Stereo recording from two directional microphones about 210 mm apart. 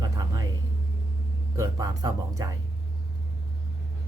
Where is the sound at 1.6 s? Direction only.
15° right (ahead or behind).